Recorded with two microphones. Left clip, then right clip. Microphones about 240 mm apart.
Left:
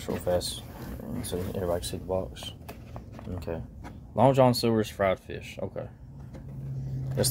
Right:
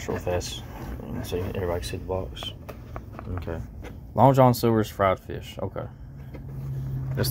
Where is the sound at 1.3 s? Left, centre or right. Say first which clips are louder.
Right 2 dB; left.